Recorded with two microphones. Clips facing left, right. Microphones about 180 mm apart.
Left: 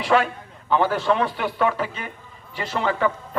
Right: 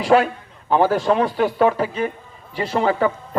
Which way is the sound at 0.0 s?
40° right (ahead or behind).